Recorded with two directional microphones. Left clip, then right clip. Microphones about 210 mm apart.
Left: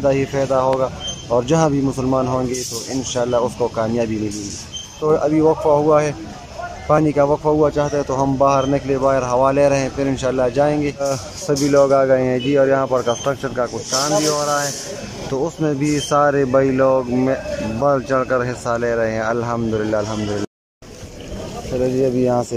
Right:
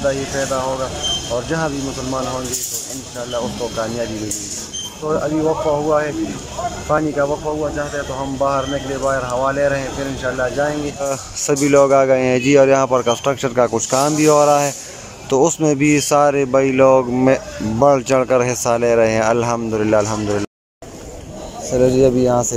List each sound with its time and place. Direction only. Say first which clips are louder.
0.0 s speech: left 2 dB; 15° left (ahead or behind)
3.2 s speech: left 5 dB; 15° left (ahead or behind)
5.0 s speech: left 3 dB; 15° left (ahead or behind)
11.0 s speech: even; centre (ahead or behind)
22.0 s speech: right 3 dB; centre (ahead or behind)